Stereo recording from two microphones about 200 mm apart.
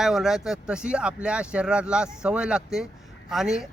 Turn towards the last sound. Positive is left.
turn(degrees=-5)  # may be behind; listen again after turning